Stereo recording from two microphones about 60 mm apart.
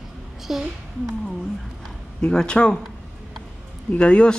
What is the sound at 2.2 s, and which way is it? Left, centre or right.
Speech, centre.